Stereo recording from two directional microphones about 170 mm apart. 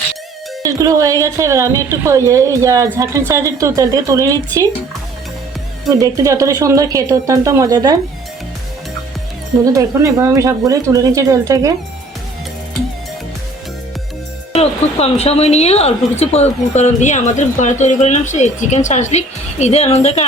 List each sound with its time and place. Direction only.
0.6 s a woman's voice: 20° right (ahead or behind)
5.9 s a woman's voice: 20° right (ahead or behind)
9.7 s a woman's voice: 20° right (ahead or behind)
14.5 s speech: 35° left (ahead or behind)